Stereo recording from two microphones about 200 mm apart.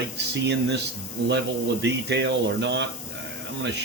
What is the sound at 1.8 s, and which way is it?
Speech, 60° right (ahead or behind).